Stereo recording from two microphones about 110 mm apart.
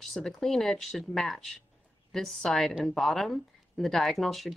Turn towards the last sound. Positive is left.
turn(degrees=0)  # may be behind; listen again after turning